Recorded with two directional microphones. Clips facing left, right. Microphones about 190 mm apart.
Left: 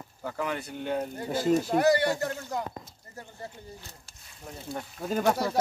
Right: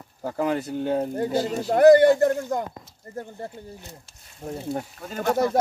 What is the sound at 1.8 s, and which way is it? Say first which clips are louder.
Speech: right 10 dB; 55° right (ahead or behind).